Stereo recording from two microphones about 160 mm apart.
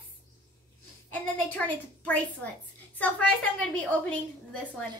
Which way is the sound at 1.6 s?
5° left (ahead or behind).